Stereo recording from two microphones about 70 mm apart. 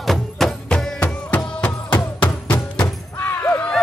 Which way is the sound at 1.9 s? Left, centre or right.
Left.